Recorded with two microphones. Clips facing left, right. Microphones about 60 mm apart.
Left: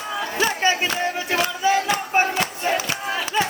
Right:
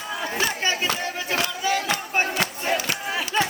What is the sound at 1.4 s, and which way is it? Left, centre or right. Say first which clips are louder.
Music: left 5 dB; left.